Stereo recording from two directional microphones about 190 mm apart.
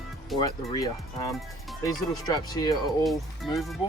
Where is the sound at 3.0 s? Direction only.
Centre (ahead or behind).